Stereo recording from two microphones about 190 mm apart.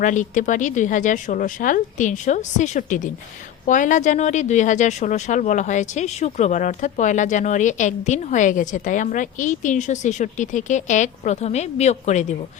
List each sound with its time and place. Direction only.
0.0 s speech: 40° left (ahead or behind)